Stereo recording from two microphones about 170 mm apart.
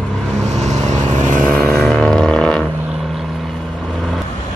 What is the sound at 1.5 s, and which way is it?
Vehicle, 5° left (ahead or behind).